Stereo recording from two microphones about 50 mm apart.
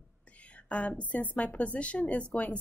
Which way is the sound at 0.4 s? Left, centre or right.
Left.